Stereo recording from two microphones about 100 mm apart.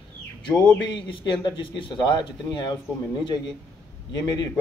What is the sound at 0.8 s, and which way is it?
A man's voice, 55° left (ahead or behind).